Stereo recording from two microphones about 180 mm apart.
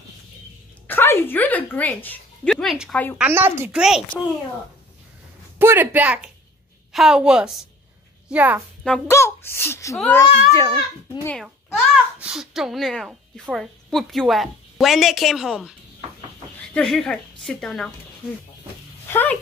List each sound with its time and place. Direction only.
0.8 s a woman's voice: 10° left (ahead or behind)
2.5 s a woman's voice: centre (ahead or behind)
5.6 s a woman's voice: 10° right (ahead or behind)
9.0 s a child's voice: 15° left (ahead or behind)
11.4 s a child's voice: 5° right (ahead or behind)
16.7 s a woman's voice: 5° left (ahead or behind)
19.0 s dog: 10° left (ahead or behind)